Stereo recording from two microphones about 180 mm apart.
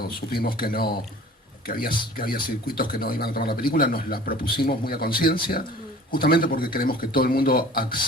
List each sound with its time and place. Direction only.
0.0 s a man's voice: 55° left (ahead or behind)